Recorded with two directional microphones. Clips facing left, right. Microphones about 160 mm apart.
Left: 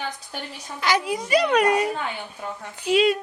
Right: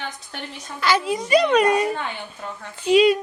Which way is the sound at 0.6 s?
15° left (ahead or behind).